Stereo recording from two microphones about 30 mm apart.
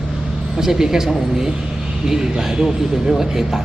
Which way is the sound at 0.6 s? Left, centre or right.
Centre.